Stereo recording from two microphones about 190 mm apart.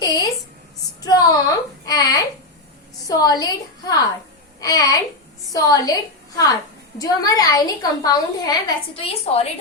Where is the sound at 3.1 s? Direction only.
20° left (ahead or behind).